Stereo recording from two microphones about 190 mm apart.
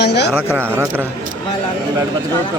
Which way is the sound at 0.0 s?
60° left (ahead or behind).